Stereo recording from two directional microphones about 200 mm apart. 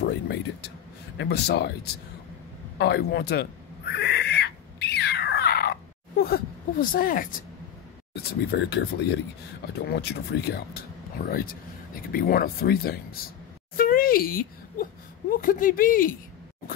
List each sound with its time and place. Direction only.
0.0 s vehicle: 55° left (ahead or behind)
1.1 s speech: 60° left (ahead or behind)
2.8 s a sound: 55° left (ahead or behind)
8.1 s speech: 55° left (ahead or behind)